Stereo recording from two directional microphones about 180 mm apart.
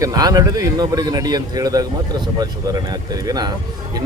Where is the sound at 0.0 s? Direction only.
20° right (ahead or behind).